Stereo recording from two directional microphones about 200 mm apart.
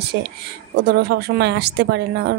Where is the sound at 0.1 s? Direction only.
55° right (ahead or behind).